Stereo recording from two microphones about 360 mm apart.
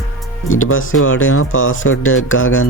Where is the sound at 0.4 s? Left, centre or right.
Left.